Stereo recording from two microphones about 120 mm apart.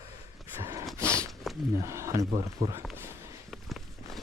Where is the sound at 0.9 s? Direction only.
25° right (ahead or behind).